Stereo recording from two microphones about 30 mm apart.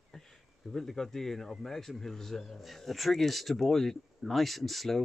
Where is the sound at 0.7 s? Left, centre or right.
Centre.